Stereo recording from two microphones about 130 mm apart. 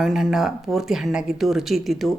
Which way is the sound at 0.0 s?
Centre (ahead or behind).